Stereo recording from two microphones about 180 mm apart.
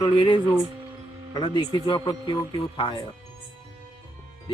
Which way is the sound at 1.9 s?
25° left (ahead or behind).